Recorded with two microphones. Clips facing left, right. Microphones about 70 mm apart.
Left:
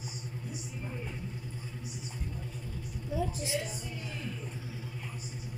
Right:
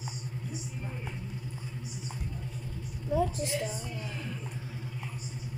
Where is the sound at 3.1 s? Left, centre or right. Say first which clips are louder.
Right 4 dB; right.